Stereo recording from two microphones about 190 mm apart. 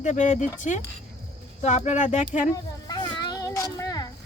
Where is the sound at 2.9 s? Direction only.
20° left (ahead or behind).